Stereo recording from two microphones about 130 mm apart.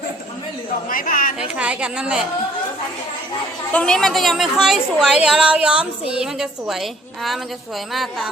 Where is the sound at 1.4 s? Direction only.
10° right (ahead or behind).